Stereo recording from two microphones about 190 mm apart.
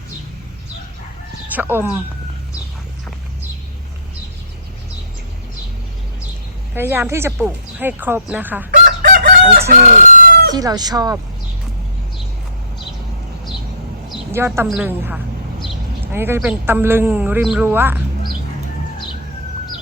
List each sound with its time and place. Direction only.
1.5 s speech: 10° right (ahead or behind)
6.7 s speech: 10° right (ahead or behind)
8.7 s chicken: 45° right (ahead or behind)
10.5 s speech: 20° right (ahead or behind)
14.3 s speech: 15° right (ahead or behind)